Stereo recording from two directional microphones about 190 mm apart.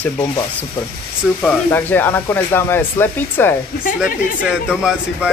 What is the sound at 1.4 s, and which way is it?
Speech, 10° left (ahead or behind).